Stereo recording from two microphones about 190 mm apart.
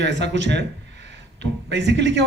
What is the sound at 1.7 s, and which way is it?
Speech, 65° right (ahead or behind).